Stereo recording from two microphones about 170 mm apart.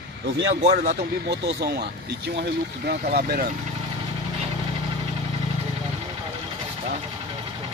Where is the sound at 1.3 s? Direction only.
75° right (ahead or behind).